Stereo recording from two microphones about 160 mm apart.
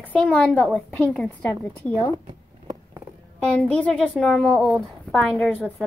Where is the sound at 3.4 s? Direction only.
5° left (ahead or behind).